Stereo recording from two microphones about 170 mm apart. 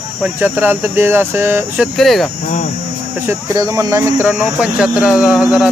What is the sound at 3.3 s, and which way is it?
Speech, 20° right (ahead or behind).